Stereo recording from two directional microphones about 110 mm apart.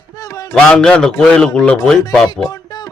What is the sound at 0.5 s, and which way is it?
A man's voice, 5° left (ahead or behind).